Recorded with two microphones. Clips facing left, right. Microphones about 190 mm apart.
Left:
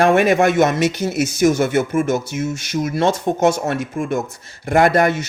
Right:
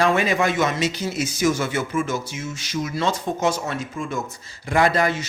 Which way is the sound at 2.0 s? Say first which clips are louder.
Left 8 dB; 60° left (ahead or behind).